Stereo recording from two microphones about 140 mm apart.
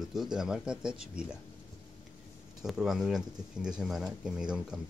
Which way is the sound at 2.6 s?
Centre (ahead or behind).